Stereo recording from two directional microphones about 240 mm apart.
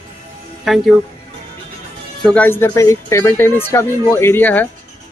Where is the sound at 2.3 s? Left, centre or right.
Centre.